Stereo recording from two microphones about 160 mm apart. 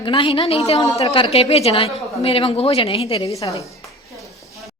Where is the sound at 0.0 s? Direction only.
35° left (ahead or behind).